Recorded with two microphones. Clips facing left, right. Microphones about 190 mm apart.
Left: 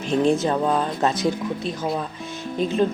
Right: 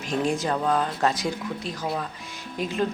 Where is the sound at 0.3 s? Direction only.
25° left (ahead or behind).